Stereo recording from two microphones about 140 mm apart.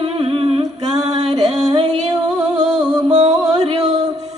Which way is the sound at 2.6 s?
55° right (ahead or behind).